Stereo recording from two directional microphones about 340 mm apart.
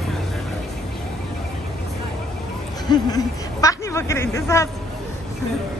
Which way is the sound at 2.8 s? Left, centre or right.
Centre.